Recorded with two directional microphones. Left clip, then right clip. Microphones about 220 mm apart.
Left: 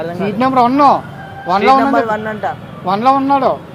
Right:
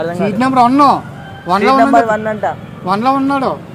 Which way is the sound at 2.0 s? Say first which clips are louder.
Right 3 dB; 5° right (ahead or behind).